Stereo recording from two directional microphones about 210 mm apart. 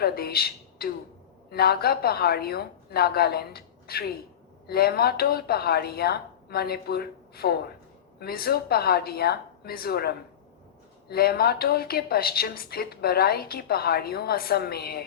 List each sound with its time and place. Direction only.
0.0 s a woman's voice: 45° left (ahead or behind)